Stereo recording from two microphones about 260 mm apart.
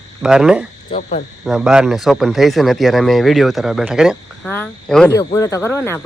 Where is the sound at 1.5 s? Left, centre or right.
Centre.